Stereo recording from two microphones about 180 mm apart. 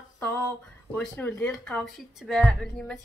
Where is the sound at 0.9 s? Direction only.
5° left (ahead or behind).